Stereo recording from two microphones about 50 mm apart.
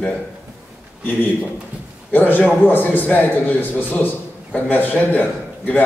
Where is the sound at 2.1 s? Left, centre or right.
Left.